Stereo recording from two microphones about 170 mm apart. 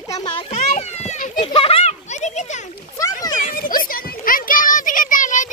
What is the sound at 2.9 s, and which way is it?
Splash, 20° left (ahead or behind).